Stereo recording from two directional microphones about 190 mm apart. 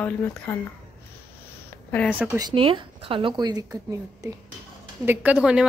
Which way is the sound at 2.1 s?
10° right (ahead or behind).